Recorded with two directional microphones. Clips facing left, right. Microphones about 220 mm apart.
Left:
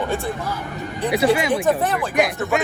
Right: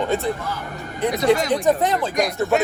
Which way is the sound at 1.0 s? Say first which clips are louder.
Even; 5° left (ahead or behind).